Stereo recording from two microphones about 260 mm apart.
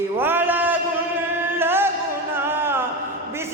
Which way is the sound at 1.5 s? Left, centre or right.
Centre.